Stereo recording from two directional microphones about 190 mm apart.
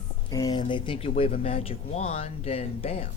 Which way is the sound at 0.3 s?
20° left (ahead or behind).